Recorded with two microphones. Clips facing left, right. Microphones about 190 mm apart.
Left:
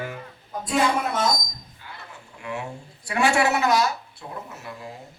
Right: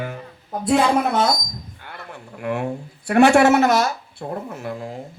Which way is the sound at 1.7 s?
60° right (ahead or behind).